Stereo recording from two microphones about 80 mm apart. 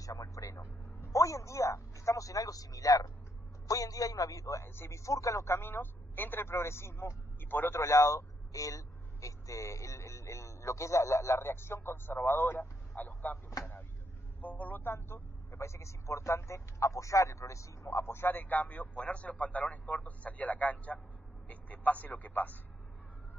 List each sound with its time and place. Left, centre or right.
0.0 s a man's voice: left
4.6 s speech: left
7.8 s speech: left
14.4 s speech: centre